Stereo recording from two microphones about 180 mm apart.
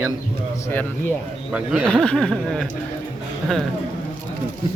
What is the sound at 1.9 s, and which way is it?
Speech, 5° left (ahead or behind).